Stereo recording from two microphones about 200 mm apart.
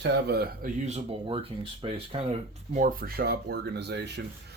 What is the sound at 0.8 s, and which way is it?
Speech, 30° right (ahead or behind).